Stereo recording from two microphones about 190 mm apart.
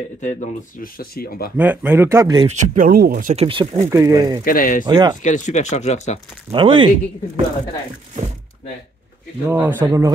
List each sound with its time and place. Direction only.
0.2 s speech: 45° left (ahead or behind)
1.6 s speech: 10° right (ahead or behind)
2.4 s speech: 40° right (ahead or behind)
3.4 s speech: 30° right (ahead or behind)
3.9 s speech: 20° right (ahead or behind)
4.5 s speech: 45° left (ahead or behind)
4.8 s speech: 20° right (ahead or behind)
5.2 s speech: 40° left (ahead or behind)
6.5 s speech: 25° right (ahead or behind)
9.5 s speech: 10° right (ahead or behind)